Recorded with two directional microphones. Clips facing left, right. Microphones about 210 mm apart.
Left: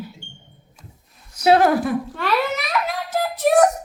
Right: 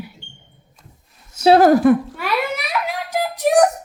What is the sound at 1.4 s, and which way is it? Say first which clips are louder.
Speech: right 4 dB; 30° right (ahead or behind).